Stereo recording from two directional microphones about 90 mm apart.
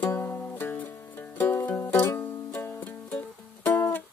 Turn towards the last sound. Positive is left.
turn(degrees=25)  # may be behind; listen again after turning